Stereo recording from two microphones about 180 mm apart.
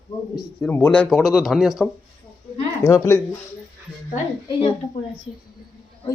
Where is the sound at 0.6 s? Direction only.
10° left (ahead or behind).